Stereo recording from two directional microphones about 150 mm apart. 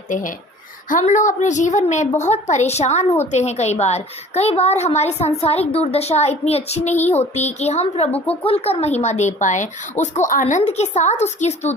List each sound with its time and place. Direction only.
0.1 s a woman's voice: 60° left (ahead or behind)